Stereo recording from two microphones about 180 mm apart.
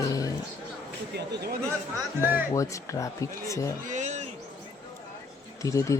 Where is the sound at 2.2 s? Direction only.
10° right (ahead or behind).